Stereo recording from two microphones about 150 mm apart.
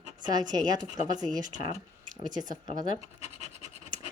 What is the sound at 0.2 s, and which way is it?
Speech, 25° right (ahead or behind).